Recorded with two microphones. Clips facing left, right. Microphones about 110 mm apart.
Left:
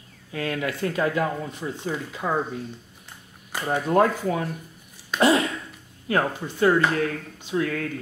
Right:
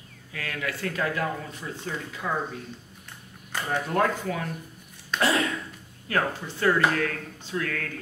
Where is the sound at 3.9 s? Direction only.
25° left (ahead or behind).